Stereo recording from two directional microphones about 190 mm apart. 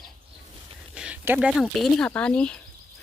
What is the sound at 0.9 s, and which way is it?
Speech, 5° right (ahead or behind).